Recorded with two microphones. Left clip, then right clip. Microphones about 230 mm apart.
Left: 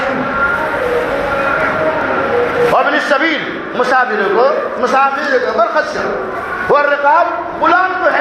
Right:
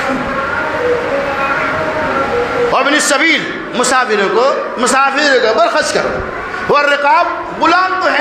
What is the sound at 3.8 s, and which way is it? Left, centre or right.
A man's voice, right.